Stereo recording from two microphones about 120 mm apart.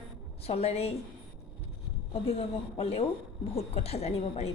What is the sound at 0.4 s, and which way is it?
Speech, 60° left (ahead or behind).